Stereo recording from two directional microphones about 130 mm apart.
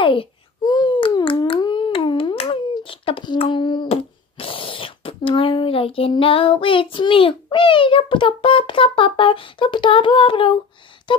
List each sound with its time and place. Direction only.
0.0 s babbling: 40° left (ahead or behind)
2.7 s a child's voice: 45° left (ahead or behind)
11.1 s a sound: 40° left (ahead or behind)